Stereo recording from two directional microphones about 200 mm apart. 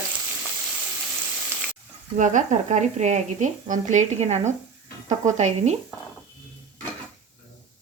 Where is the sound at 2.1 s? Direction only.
40° right (ahead or behind).